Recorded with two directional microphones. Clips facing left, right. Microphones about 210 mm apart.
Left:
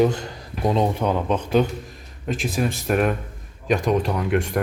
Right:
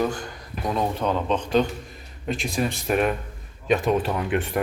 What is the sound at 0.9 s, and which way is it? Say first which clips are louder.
Speech: left 2 dB; 15° left (ahead or behind).